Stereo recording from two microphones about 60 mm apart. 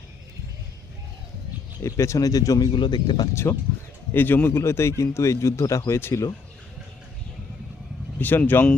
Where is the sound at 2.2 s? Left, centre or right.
Left.